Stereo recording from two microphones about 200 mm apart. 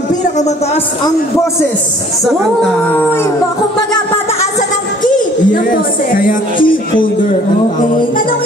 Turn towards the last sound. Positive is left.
turn(degrees=45)  # may be behind; listen again after turning